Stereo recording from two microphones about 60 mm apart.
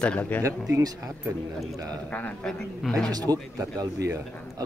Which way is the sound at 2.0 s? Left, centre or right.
Left.